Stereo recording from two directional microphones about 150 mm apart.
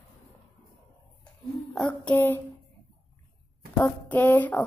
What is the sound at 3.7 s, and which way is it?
Speech, 10° left (ahead or behind).